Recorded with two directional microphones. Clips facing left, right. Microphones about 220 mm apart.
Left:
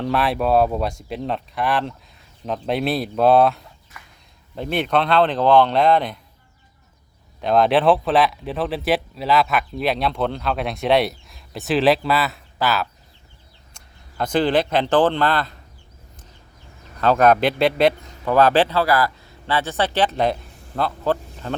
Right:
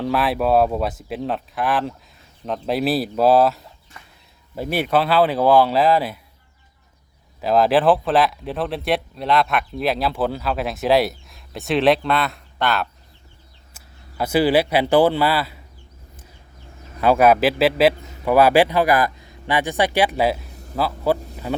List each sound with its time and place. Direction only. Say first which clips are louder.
0.0 s speech: right 1 dB; centre (ahead or behind)
3.9 s a sound: left 1 dB; 30° right (ahead or behind)
4.5 s a man's voice: right 1 dB; 5° right (ahead or behind)
7.4 s a man's voice: even; centre (ahead or behind)
17.0 s a man's voice: right 1 dB; 10° right (ahead or behind)